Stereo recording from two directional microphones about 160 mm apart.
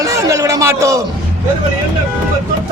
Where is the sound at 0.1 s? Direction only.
20° right (ahead or behind).